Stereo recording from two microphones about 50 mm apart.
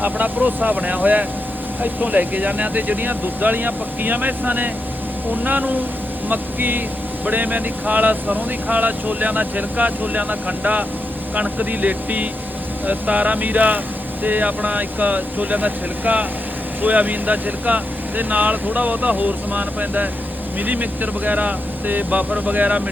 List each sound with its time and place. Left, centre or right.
0.0 s speech: right